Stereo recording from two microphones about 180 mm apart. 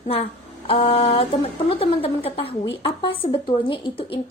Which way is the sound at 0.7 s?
35° left (ahead or behind).